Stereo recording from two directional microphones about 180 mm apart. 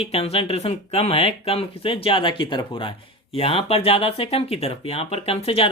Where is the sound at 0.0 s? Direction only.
35° left (ahead or behind).